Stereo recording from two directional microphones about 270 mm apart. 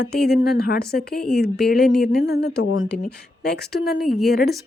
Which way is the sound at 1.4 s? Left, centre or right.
Left.